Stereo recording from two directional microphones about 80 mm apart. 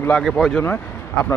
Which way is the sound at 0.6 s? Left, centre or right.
Left.